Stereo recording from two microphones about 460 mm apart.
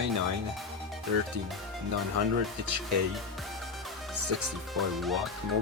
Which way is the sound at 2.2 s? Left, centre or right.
Right.